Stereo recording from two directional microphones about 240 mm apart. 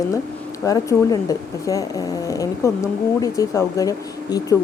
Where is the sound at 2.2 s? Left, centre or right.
Centre.